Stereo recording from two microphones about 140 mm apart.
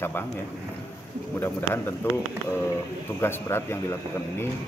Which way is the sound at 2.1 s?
15° left (ahead or behind).